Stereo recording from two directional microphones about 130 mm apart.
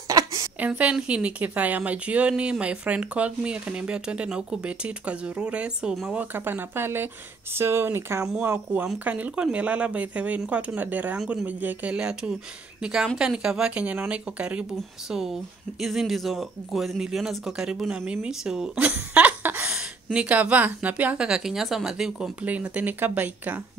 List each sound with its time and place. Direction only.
0.1 s a sound: 25° right (ahead or behind)
0.6 s speech: 10° right (ahead or behind)
6.3 s speech: 15° right (ahead or behind)